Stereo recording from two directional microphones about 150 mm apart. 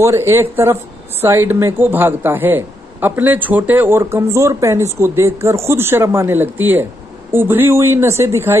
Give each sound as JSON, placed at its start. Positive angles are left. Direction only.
{"t": 0.0, "sound": "a woman's voice", "side_deg": -15}